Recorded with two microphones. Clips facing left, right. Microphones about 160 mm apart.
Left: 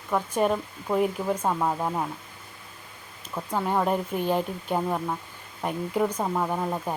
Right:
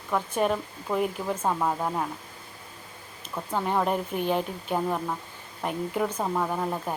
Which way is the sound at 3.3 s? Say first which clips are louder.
Left 1 dB; 5° left (ahead or behind).